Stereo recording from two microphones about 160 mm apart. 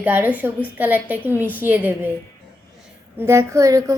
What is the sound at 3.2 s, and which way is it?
Speech, 15° right (ahead or behind).